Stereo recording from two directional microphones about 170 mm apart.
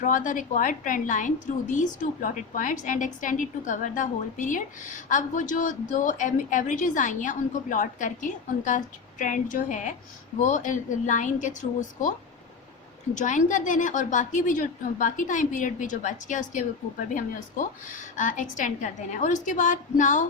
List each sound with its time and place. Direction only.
0.0 s a woman's voice: 50° left (ahead or behind)
13.1 s a woman's voice: 45° left (ahead or behind)
18.2 s a woman's voice: 50° left (ahead or behind)